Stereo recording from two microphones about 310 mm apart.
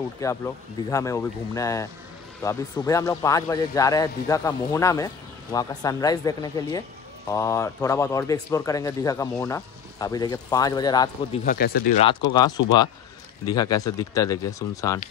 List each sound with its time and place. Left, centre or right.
0.2 s a man's voice: centre
11.4 s speech: left
12.0 s a man's voice: centre